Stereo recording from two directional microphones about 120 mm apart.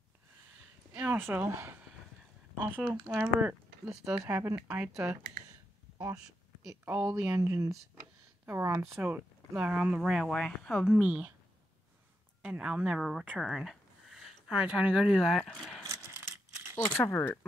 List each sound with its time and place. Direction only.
0.9 s speech: 15° right (ahead or behind)
2.8 s speech: 10° right (ahead or behind)
4.3 s speech: 20° right (ahead or behind)
6.6 s speech: 20° right (ahead or behind)
7.3 s speech: 25° right (ahead or behind)
10.0 s speech: centre (ahead or behind)
10.9 s speech: 10° right (ahead or behind)
12.4 s speech: 5° right (ahead or behind)
15.8 s a sound: 25° right (ahead or behind)
16.9 s speech: 15° left (ahead or behind)